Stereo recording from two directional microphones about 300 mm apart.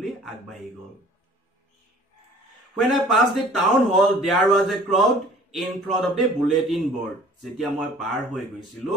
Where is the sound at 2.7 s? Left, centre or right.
Centre.